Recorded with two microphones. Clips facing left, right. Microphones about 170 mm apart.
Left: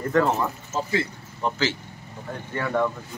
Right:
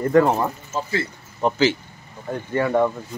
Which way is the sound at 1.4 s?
15° right (ahead or behind).